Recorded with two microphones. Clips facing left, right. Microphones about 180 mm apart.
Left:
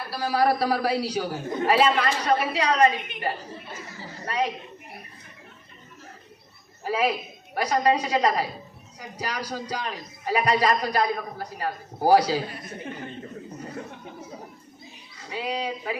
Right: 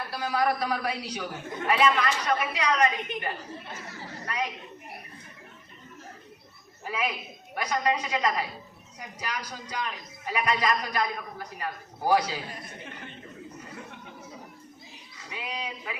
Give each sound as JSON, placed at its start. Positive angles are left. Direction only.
{"t": 0.1, "sound": "a man's voice", "side_deg": 35}
{"t": 6.8, "sound": "a man's voice", "side_deg": 35}
{"t": 13.6, "sound": "chuckle", "side_deg": 35}
{"t": 15.3, "sound": "a man's voice", "side_deg": 35}